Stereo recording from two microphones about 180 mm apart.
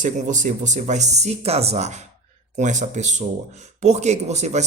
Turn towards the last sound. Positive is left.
turn(degrees=-40)  # may be behind; listen again after turning